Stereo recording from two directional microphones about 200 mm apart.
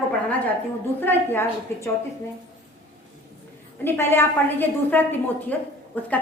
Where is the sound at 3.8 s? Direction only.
10° left (ahead or behind).